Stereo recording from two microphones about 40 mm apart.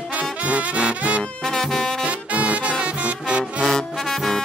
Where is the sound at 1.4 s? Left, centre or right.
Centre.